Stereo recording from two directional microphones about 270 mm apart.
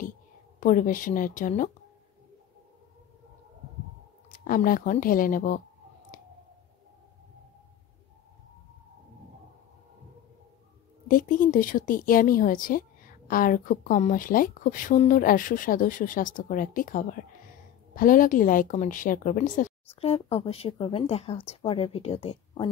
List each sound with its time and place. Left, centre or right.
0.6 s speech: left
4.3 s speech: left
11.1 s speech: left